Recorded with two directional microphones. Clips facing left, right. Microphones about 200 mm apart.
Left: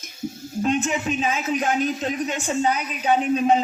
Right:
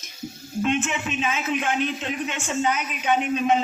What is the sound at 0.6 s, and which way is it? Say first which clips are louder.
A man's voice: left 2 dB; 35° left (ahead or behind).